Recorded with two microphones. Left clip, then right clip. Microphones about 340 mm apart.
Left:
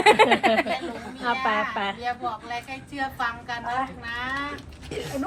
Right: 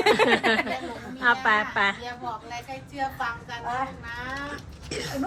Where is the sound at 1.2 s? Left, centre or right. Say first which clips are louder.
Right 3 dB; centre.